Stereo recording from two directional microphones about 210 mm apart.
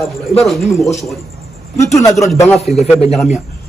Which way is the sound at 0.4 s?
Centre (ahead or behind).